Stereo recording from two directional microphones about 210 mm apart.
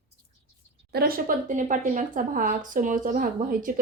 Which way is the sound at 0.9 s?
45° right (ahead or behind).